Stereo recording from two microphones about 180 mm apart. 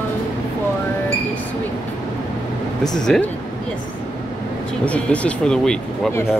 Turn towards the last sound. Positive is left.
turn(degrees=5)  # may be behind; listen again after turning